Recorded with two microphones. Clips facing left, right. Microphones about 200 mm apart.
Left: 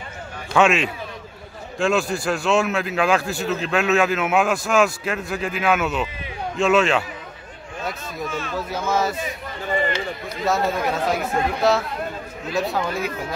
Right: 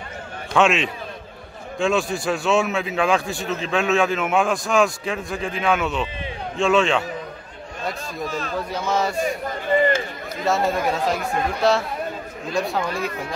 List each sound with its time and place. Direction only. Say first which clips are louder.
0.6 s a man's voice: left 1 dB; centre (ahead or behind)
8.3 s speech: even; 35° right (ahead or behind)
8.5 s a man's voice: left 1 dB; 5° left (ahead or behind)
9.5 s run: right 4 dB; 45° right (ahead or behind)
10.4 s a man's voice: right 1 dB; centre (ahead or behind)